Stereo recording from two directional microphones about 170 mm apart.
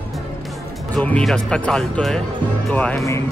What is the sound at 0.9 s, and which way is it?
Speech, 5° left (ahead or behind).